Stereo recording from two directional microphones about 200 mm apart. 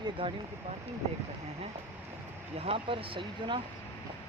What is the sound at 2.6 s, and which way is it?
Speech, 30° right (ahead or behind).